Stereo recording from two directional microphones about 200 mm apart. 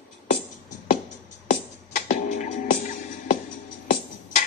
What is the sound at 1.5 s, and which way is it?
Music, 40° left (ahead or behind).